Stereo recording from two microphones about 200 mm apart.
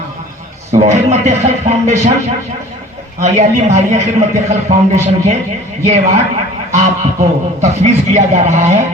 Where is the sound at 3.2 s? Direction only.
35° right (ahead or behind).